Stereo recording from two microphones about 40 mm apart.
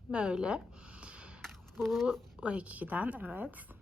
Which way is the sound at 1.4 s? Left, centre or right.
Centre.